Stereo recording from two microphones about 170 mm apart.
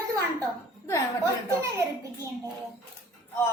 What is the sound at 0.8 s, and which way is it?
Speech, 20° left (ahead or behind).